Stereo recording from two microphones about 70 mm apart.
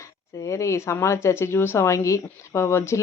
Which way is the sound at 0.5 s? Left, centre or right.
Left.